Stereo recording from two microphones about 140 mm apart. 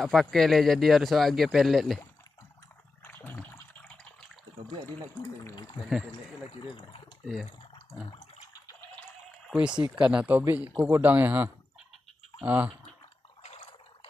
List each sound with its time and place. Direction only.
0.0 s speech: centre (ahead or behind)
3.0 s a sound: 15° left (ahead or behind)
9.5 s speech: 5° right (ahead or behind)
13.4 s water: 45° left (ahead or behind)